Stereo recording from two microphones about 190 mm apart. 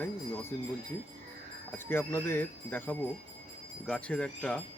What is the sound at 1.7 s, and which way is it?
Speech, 10° left (ahead or behind).